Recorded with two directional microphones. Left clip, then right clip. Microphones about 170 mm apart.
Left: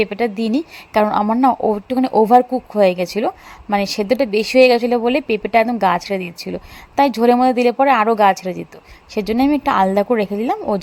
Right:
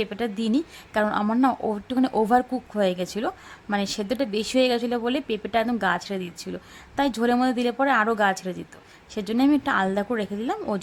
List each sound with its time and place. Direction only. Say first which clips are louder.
0.0 s speech: left 9 dB; 15° left (ahead or behind)